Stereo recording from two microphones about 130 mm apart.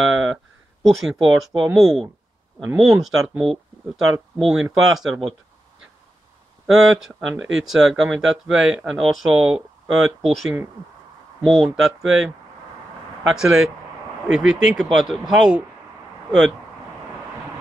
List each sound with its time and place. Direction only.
0.8 s speech: 5° right (ahead or behind)
6.6 s speech: centre (ahead or behind)